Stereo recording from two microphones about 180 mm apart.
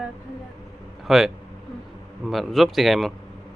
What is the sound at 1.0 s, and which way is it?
Speech, centre (ahead or behind).